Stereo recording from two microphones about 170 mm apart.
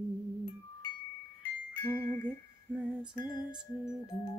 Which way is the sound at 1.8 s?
10° left (ahead or behind).